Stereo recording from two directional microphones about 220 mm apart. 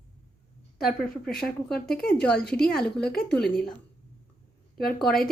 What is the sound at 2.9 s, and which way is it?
Speech, 45° left (ahead or behind).